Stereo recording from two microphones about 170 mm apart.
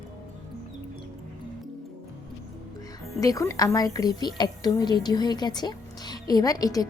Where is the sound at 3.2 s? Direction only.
20° left (ahead or behind).